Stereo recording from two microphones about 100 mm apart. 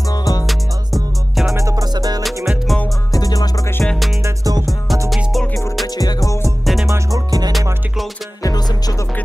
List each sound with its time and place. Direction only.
0.1 s music: 40° left (ahead or behind)
0.5 s music: centre (ahead or behind)
1.5 s music: 35° right (ahead or behind)
2.2 s music: centre (ahead or behind)
3.1 s music: 40° left (ahead or behind)
3.8 s music: 5° left (ahead or behind)
4.2 s music: 40° right (ahead or behind)
5.1 s music: centre (ahead or behind)
5.9 s music: 35° left (ahead or behind)
6.6 s music: centre (ahead or behind)
6.9 s music: 40° right (ahead or behind)
8.4 s music: 40° left (ahead or behind)